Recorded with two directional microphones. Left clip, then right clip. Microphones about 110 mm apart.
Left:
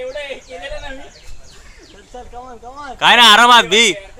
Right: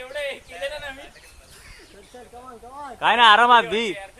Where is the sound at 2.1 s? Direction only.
15° right (ahead or behind).